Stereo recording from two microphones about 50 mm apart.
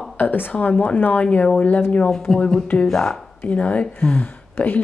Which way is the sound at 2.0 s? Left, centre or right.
Centre.